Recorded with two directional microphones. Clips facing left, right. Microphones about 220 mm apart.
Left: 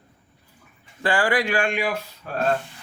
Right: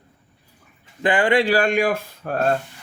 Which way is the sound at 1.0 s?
20° right (ahead or behind).